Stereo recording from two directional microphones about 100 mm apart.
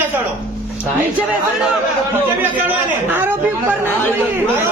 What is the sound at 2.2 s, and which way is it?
A man's voice, 20° right (ahead or behind).